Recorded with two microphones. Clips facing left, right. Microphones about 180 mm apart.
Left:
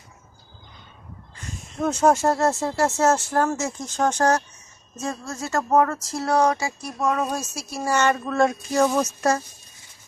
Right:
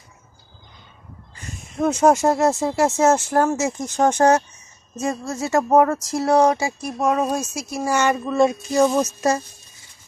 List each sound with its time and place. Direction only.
1.8 s speech: 10° right (ahead or behind)